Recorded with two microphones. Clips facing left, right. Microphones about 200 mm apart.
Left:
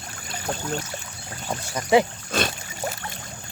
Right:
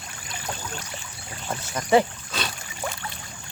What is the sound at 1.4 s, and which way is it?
Speech, 10° left (ahead or behind).